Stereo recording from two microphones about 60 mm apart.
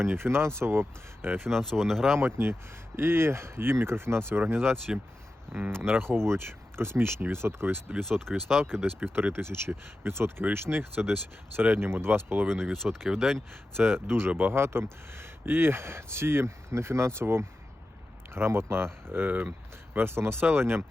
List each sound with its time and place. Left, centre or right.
0.0 s speech: right
1.5 s speech: centre
2.1 s speech: right
7.9 s speech: centre
9.1 s speech: right
12.7 s speech: centre
13.7 s speech: right